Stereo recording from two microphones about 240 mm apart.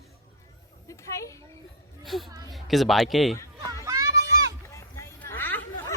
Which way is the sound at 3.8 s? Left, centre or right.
Centre.